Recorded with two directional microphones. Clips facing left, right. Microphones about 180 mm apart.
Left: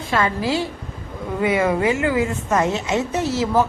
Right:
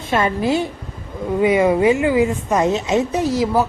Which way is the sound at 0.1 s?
20° right (ahead or behind).